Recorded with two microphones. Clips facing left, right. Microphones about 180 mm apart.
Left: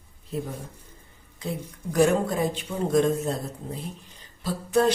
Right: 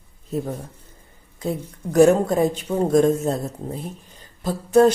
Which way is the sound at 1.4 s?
45° right (ahead or behind).